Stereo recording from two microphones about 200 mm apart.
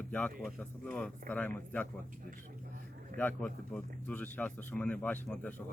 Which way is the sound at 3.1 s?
10° left (ahead or behind).